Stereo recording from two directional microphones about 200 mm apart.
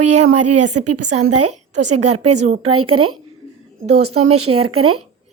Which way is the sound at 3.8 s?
90° right.